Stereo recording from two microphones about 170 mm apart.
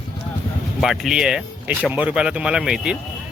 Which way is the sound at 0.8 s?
Centre (ahead or behind).